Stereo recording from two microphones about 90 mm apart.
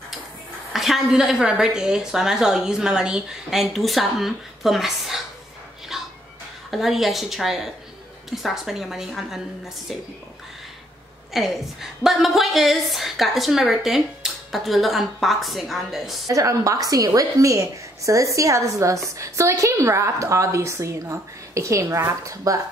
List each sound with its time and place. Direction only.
0.7 s a woman's voice: centre (ahead or behind)
5.9 s music: 5° right (ahead or behind)
6.7 s a woman's voice: centre (ahead or behind)
11.3 s a woman's voice: centre (ahead or behind)
16.3 s a woman's voice: 40° right (ahead or behind)